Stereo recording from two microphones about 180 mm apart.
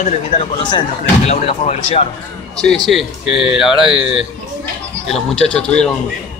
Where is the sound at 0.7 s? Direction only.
30° left (ahead or behind).